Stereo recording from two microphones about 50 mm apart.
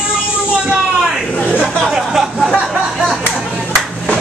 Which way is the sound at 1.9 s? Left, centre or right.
Centre.